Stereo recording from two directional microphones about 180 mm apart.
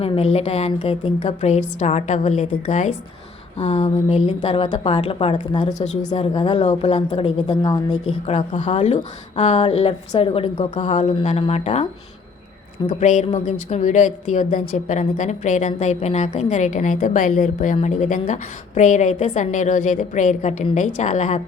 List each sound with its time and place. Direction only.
0.0 s a woman's voice: 35° left (ahead or behind)
6.1 s speech: 25° left (ahead or behind)
6.6 s a woman's voice: 40° left (ahead or behind)
7.5 s speech: 20° left (ahead or behind)
7.9 s a woman's voice: 40° left (ahead or behind)
12.9 s a woman's voice: 40° left (ahead or behind)